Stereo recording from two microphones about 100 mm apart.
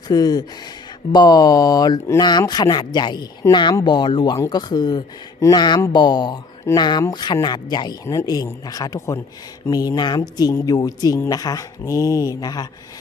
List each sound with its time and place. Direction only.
0.1 s speech: 40° left (ahead or behind)
8.0 s speech: 35° left (ahead or behind)